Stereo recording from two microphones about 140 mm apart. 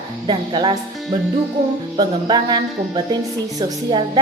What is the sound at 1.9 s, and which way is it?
Speech, 30° right (ahead or behind).